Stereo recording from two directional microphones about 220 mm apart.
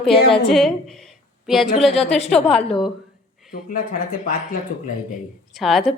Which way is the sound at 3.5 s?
40° left (ahead or behind).